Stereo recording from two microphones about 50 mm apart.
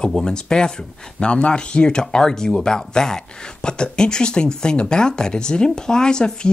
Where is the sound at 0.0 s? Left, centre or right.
Centre.